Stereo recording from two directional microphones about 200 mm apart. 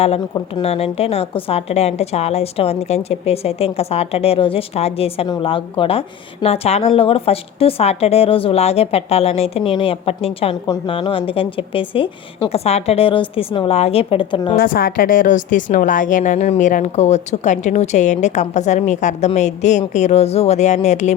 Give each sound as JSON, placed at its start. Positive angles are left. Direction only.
{"t": 0.3, "sound": "a woman's voice", "side_deg": 25}
{"t": 14.5, "sound": "a woman's voice", "side_deg": 45}